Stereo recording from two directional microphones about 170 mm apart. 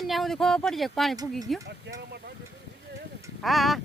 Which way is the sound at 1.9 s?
90° right.